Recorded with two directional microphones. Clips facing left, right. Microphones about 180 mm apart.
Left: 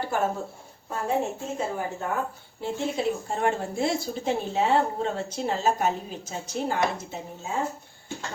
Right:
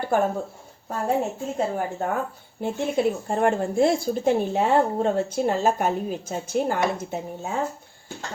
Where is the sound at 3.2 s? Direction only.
50° right (ahead or behind).